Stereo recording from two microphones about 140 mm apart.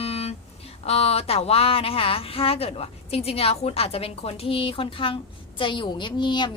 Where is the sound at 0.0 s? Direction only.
45° left (ahead or behind).